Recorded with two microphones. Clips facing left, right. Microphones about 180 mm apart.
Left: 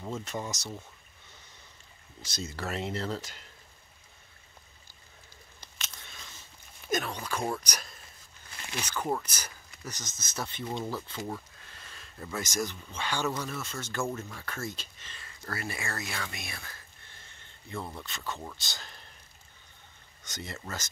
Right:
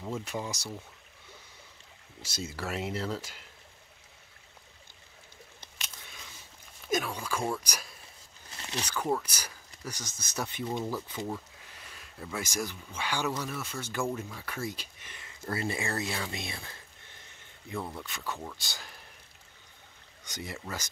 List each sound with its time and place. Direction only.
0.1 s speech: 10° right (ahead or behind)
2.2 s speech: 5° right (ahead or behind)
5.8 s scissors: 10° right (ahead or behind)
6.9 s speech: 5° right (ahead or behind)
9.2 s speech: 10° right (ahead or behind)
20.2 s speech: 10° right (ahead or behind)